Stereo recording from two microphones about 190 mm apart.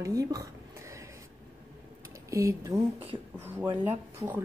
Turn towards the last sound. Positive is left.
turn(degrees=-10)  # may be behind; listen again after turning